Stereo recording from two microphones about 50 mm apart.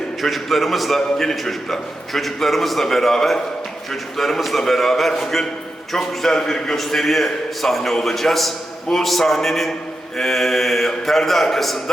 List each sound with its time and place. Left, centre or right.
0.2 s a man's voice: centre